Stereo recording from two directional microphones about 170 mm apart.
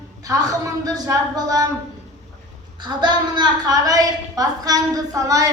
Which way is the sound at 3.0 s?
25° right (ahead or behind).